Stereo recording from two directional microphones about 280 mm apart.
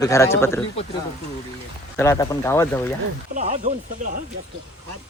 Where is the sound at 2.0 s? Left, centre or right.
Centre.